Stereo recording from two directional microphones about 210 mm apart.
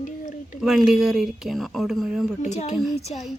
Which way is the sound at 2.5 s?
30° left (ahead or behind).